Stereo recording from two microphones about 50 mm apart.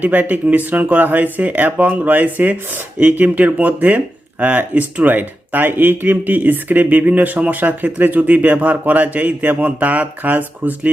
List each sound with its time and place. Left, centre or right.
0.0 s speech: right